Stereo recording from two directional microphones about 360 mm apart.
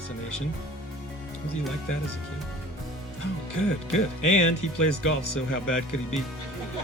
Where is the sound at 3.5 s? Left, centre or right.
Left.